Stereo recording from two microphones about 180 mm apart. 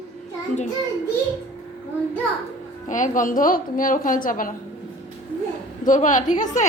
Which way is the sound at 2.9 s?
45° left (ahead or behind).